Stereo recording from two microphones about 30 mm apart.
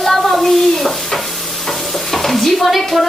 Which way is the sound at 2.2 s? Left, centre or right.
Centre.